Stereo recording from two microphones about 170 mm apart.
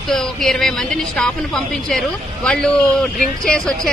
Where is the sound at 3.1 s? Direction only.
50° left (ahead or behind).